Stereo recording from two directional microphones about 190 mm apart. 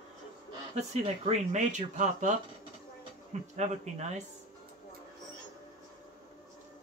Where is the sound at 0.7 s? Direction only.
35° right (ahead or behind).